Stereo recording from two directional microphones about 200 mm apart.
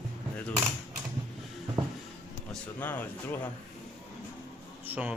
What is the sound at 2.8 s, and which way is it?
Speech, 10° left (ahead or behind).